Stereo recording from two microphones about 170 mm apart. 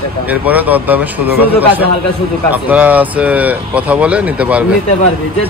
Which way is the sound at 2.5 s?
10° right (ahead or behind).